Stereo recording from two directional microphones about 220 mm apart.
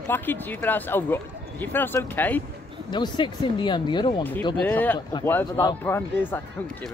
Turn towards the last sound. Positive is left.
turn(degrees=10)  # may be behind; listen again after turning